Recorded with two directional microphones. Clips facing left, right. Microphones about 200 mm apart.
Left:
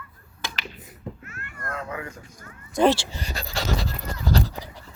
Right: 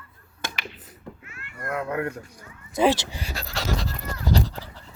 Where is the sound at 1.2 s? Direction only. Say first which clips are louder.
Right 1 dB; 45° left (ahead or behind).